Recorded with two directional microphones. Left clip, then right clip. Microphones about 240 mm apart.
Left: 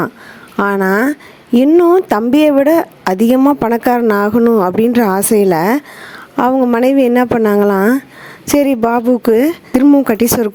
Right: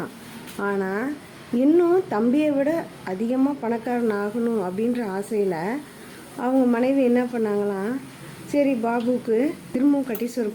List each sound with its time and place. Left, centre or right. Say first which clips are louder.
0.5 s a woman's voice: left 13 dB; left